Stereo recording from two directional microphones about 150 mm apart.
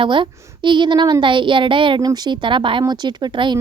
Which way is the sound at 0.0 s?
35° right (ahead or behind).